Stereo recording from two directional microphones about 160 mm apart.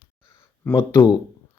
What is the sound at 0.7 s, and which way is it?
Speech, 15° left (ahead or behind).